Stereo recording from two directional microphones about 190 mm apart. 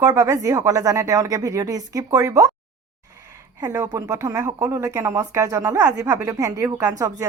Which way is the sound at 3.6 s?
15° right (ahead or behind).